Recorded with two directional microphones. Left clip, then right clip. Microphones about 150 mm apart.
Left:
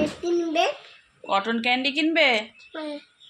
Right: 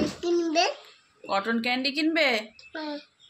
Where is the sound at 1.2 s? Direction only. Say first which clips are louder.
Left 3 dB; 20° left (ahead or behind).